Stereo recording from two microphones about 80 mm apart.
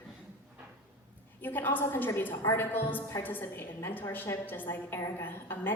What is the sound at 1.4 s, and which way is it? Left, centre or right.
A woman's voice, left.